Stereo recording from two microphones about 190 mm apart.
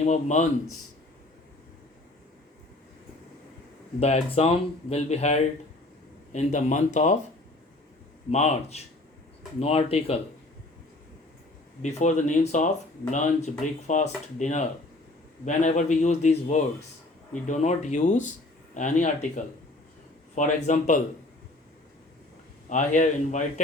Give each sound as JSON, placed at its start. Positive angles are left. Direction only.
{"t": 0.0, "sound": "speech", "side_deg": 35}
{"t": 4.0, "sound": "speech", "side_deg": 30}
{"t": 8.3, "sound": "speech", "side_deg": 35}
{"t": 11.8, "sound": "speech", "side_deg": 40}
{"t": 22.7, "sound": "speech", "side_deg": 40}